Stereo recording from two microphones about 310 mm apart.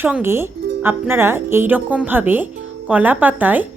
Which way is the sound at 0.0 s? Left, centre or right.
Centre.